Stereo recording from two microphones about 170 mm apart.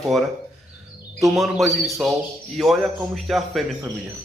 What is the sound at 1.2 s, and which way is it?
Speech, centre (ahead or behind).